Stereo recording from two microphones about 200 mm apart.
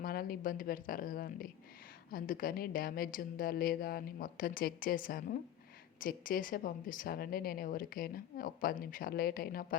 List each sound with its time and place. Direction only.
0.0 s a woman's voice: 45° left (ahead or behind)